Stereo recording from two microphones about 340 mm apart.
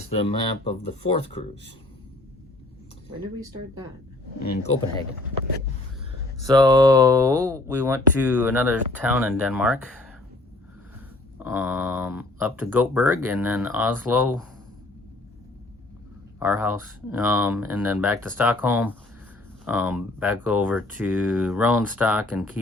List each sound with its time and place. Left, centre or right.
0.1 s speech: centre
6.4 s speech: centre
11.4 s speech: centre
16.4 s speech: centre